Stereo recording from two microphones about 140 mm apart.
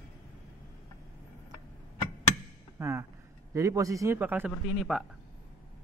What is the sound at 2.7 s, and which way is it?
A man's voice, 20° right (ahead or behind).